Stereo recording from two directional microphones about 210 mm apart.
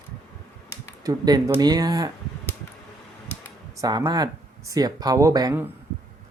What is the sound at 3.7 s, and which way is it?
Speech, 15° right (ahead or behind).